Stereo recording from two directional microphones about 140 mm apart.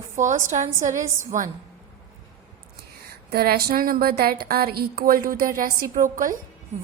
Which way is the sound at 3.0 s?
90° right.